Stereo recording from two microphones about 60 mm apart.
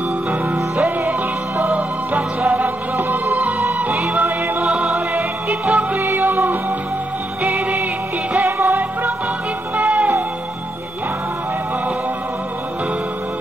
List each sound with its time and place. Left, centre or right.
0.3 s music: right
5.9 s music: right
8.5 s music: right